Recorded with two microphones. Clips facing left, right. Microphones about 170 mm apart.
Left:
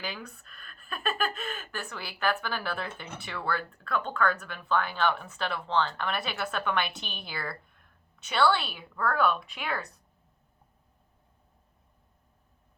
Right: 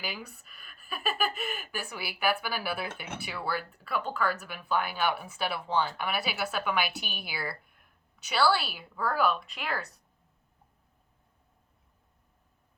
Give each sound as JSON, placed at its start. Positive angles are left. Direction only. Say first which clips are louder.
{"t": 0.0, "sound": "a woman's voice", "louder": "left 1 dB", "side_deg": -5}